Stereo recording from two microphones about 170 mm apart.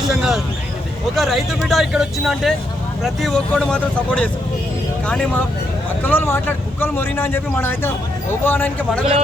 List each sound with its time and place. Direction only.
0.1 s speech: 5° right (ahead or behind)
6.0 s speech: 10° left (ahead or behind)